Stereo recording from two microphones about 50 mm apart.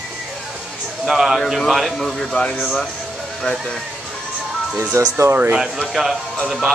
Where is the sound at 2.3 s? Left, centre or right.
Left.